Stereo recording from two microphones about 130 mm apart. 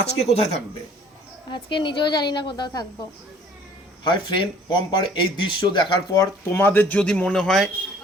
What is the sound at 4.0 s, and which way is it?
Speech, 40° left (ahead or behind).